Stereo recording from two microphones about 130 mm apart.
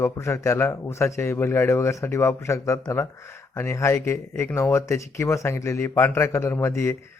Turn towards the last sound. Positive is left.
turn(degrees=20)  # may be behind; listen again after turning